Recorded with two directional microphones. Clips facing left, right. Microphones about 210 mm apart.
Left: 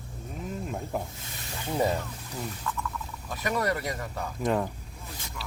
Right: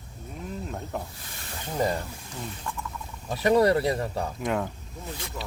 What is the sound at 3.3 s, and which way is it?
Speech, 30° right (ahead or behind).